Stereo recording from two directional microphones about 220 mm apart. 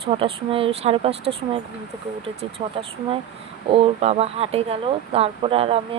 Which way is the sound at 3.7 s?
25° right (ahead or behind).